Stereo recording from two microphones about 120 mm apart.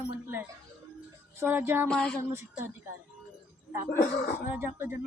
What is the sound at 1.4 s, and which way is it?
Speech, 20° right (ahead or behind).